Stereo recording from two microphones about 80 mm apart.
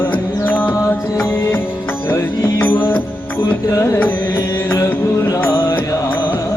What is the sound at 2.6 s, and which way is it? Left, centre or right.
Music, left.